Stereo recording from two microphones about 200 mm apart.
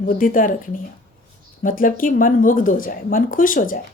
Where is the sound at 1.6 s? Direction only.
45° left (ahead or behind).